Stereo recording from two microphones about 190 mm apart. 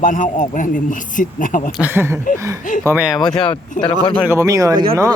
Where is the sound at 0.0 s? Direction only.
40° left (ahead or behind).